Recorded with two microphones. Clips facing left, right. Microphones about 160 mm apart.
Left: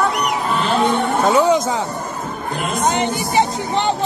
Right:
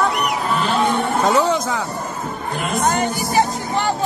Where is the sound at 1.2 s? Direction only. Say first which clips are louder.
Left 3 dB; 10° left (ahead or behind).